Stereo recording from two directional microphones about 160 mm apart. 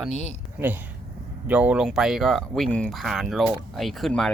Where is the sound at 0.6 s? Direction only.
10° right (ahead or behind).